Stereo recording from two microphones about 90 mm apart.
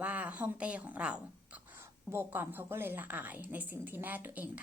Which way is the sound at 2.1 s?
25° right (ahead or behind).